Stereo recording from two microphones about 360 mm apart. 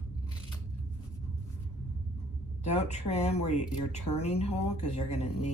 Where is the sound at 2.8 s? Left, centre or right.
Centre.